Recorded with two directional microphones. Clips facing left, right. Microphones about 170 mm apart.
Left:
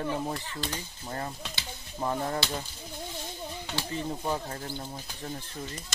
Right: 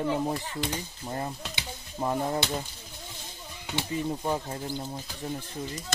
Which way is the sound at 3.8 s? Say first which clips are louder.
Right 4 dB; 15° right (ahead or behind).